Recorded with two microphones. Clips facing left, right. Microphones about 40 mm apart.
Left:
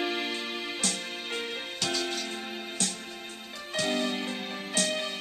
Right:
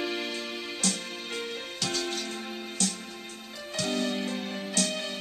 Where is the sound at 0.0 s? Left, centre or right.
Centre.